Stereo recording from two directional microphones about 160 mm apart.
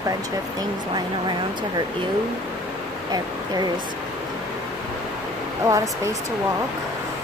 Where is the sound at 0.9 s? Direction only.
25° right (ahead or behind).